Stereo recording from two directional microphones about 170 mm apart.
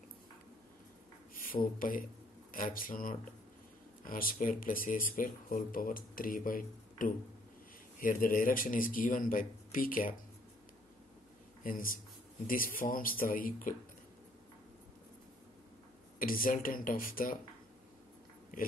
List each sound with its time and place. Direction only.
1.5 s speech: 55° left (ahead or behind)
11.6 s speech: 55° left (ahead or behind)
16.2 s speech: 55° left (ahead or behind)